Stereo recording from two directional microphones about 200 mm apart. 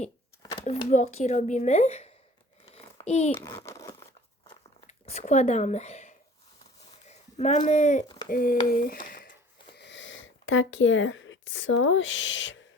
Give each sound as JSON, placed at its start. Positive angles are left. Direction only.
{"t": 0.6, "sound": "speech", "side_deg": 35}
{"t": 2.7, "sound": "a sound", "side_deg": 35}
{"t": 3.3, "sound": "crumpling", "side_deg": 15}
{"t": 4.9, "sound": "speech", "side_deg": 35}
{"t": 9.7, "sound": "speech", "side_deg": 60}